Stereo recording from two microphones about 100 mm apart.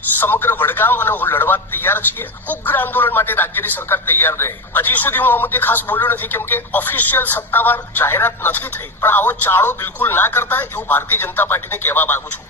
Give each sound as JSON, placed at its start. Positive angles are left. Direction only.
{"t": 0.2, "sound": "speech", "side_deg": 20}